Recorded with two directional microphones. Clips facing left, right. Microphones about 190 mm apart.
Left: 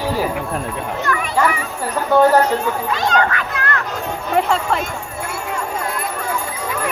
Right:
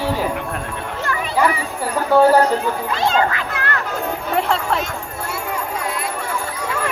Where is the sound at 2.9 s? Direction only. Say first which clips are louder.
Right 1 dB; 25° right (ahead or behind).